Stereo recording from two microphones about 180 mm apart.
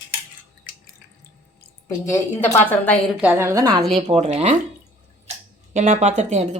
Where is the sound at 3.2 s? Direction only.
10° right (ahead or behind).